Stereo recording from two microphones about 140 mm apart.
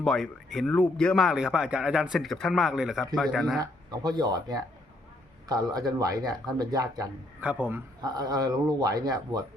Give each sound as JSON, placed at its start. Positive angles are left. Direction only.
{"t": 0.0, "sound": "speech", "side_deg": 0}
{"t": 3.6, "sound": "speech", "side_deg": -30}
{"t": 7.4, "sound": "a man's voice", "side_deg": -10}
{"t": 8.0, "sound": "speech", "side_deg": -30}